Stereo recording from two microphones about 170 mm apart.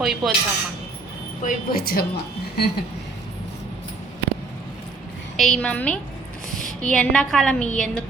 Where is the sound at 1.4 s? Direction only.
60° left (ahead or behind).